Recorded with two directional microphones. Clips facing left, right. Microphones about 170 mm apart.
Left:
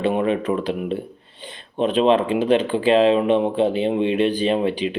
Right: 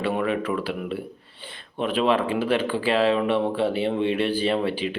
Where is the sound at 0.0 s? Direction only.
25° left (ahead or behind).